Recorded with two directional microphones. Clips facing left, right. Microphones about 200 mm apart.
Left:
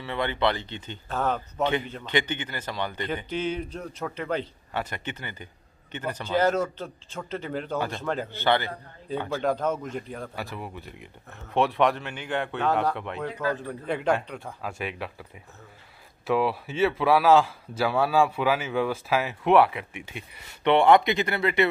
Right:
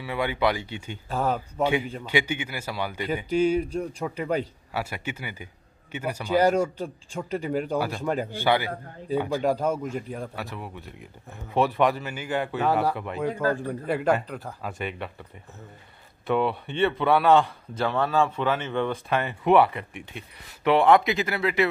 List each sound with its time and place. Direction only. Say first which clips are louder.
0.0 s a man's voice: right 1 dB; 10° right (ahead or behind)
13.3 s a man's voice: right 4 dB; 45° right (ahead or behind)
13.6 s a man's voice: right 3 dB; 5° right (ahead or behind)
16.3 s a man's voice: even; centre (ahead or behind)